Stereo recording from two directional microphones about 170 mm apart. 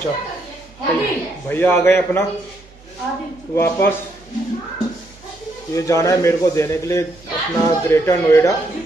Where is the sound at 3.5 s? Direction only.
15° left (ahead or behind).